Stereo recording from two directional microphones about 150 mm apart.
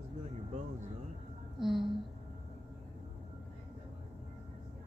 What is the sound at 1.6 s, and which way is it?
Speech, 5° right (ahead or behind).